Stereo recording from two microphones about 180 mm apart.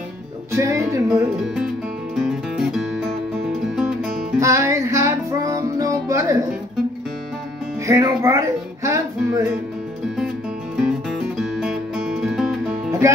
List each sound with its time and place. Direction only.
0.5 s speech: 15° right (ahead or behind)
1.4 s speech: 5° right (ahead or behind)
2.1 s music: 5° right (ahead or behind)
4.4 s music: 15° right (ahead or behind)
7.8 s music: 20° right (ahead or behind)
10.8 s music: 5° right (ahead or behind)
13.0 s music: 15° right (ahead or behind)